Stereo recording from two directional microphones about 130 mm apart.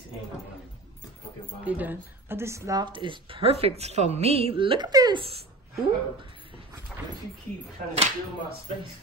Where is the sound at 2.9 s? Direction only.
40° right (ahead or behind).